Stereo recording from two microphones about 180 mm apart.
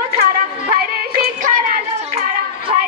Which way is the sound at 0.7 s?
55° right (ahead or behind).